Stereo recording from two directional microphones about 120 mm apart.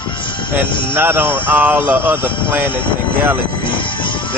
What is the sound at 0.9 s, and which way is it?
Speech, 20° right (ahead or behind).